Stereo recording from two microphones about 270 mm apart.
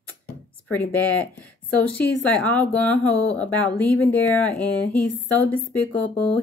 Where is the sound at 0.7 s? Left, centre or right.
Centre.